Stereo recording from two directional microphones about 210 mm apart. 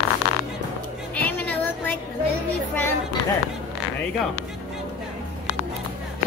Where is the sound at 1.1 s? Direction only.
10° left (ahead or behind).